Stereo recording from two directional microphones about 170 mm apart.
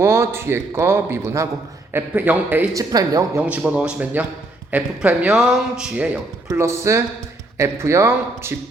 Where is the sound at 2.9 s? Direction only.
20° right (ahead or behind).